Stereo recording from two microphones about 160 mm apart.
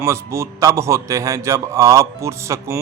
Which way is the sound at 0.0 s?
15° right (ahead or behind).